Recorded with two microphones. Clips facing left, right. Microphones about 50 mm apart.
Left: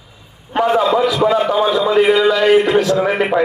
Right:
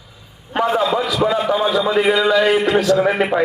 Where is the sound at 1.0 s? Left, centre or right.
Left.